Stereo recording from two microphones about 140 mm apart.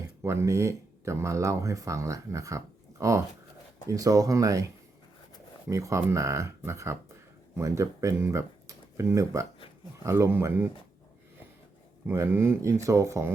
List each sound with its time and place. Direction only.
0.2 s speech: 20° right (ahead or behind)
12.0 s speech: 20° right (ahead or behind)